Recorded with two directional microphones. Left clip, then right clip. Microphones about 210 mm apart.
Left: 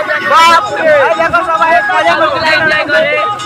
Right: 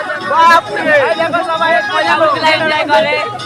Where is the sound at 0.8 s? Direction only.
25° right (ahead or behind).